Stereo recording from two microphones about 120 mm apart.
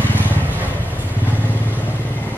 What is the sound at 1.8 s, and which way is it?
Vehicle, 15° left (ahead or behind).